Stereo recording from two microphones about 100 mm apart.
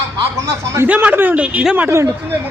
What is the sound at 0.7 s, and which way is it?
A man's voice, 15° right (ahead or behind).